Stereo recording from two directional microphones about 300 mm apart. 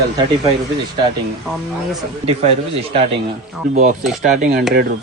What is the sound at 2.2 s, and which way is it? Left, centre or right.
Speech, right.